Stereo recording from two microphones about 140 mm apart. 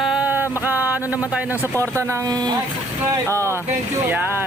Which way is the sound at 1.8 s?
20° right (ahead or behind).